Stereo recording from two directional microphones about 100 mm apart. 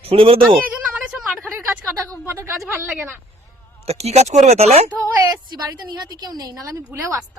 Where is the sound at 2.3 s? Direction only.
25° right (ahead or behind).